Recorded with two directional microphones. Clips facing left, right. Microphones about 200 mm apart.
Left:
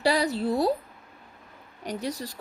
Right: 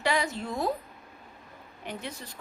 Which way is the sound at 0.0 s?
35° left (ahead or behind).